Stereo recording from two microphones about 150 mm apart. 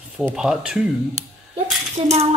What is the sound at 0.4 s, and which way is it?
Speech, 5° right (ahead or behind).